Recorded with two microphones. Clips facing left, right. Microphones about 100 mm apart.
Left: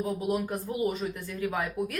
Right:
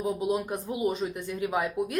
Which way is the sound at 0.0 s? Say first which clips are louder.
Right 1 dB; 20° right (ahead or behind).